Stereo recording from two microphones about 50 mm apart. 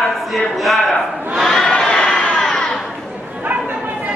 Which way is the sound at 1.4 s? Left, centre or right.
Centre.